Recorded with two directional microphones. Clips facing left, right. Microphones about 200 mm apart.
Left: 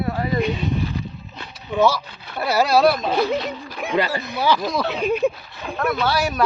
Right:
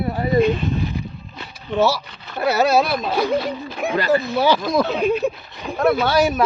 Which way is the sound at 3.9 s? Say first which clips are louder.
Right 4 dB; 15° left (ahead or behind).